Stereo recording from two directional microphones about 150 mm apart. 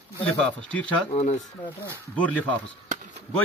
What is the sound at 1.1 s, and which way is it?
Speech, 45° left (ahead or behind).